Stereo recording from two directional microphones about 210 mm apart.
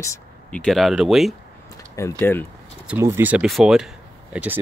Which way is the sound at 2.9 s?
10° right (ahead or behind).